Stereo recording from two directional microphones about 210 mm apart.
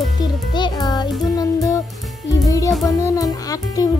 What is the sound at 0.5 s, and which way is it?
Speech, 20° left (ahead or behind).